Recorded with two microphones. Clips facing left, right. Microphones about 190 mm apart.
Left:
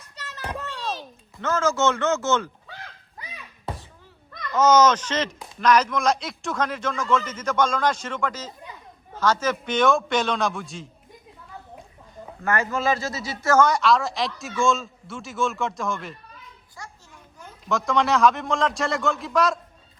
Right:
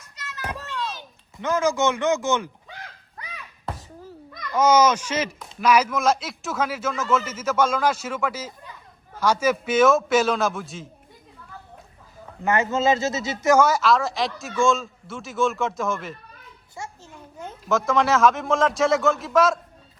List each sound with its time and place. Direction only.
0.2 s children playing: 35° left (ahead or behind)
0.6 s a sound: 35° left (ahead or behind)
1.4 s a man's voice: 15° right (ahead or behind)
4.5 s a man's voice: 10° right (ahead or behind)
12.4 s speech: 20° right (ahead or behind)
13.7 s a man's voice: centre (ahead or behind)
17.7 s a man's voice: centre (ahead or behind)